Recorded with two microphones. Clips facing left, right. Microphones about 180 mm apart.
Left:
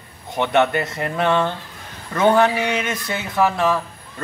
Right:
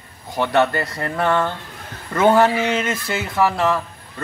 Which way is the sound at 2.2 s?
5° right (ahead or behind).